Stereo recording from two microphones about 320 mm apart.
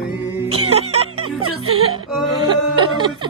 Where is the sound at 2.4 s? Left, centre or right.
Centre.